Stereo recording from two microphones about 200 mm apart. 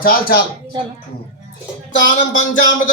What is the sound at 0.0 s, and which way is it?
Speech, 50° left (ahead or behind).